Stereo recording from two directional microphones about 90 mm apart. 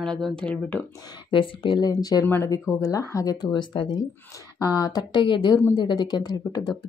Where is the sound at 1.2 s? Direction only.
65° left (ahead or behind).